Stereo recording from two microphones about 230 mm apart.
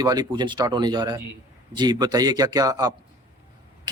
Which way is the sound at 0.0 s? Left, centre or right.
Centre.